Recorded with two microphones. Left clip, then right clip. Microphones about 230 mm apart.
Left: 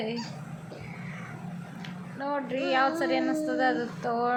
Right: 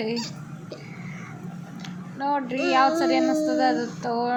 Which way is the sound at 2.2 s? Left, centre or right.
Centre.